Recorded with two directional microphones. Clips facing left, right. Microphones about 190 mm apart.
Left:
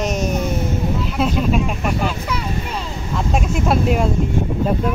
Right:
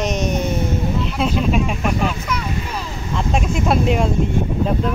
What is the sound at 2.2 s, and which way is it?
Vehicle, 25° left (ahead or behind).